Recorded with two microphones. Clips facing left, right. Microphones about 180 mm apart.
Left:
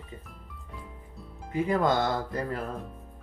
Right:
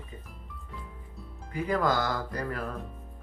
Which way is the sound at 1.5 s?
25° left (ahead or behind).